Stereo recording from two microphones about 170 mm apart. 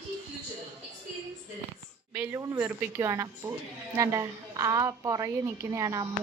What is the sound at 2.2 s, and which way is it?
A woman's voice, 10° right (ahead or behind).